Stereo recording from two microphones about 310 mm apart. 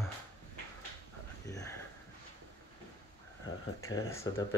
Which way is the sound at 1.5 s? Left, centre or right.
Centre.